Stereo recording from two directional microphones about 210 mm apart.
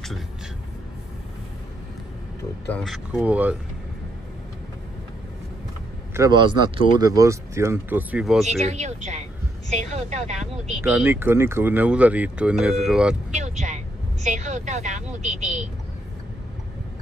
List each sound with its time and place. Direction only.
2.7 s speech: centre (ahead or behind)
6.1 s speech: 20° right (ahead or behind); by 8.6 s centre (ahead or behind)
8.6 s a woman's voice: 30° right (ahead or behind)
10.8 s speech: 10° right (ahead or behind)
13.3 s a woman's voice: 35° right (ahead or behind)